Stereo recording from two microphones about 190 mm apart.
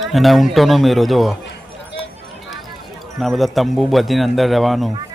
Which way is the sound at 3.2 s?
Centre (ahead or behind).